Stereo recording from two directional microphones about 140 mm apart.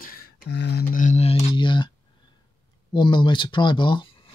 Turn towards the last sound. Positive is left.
turn(degrees=35)  # may be behind; listen again after turning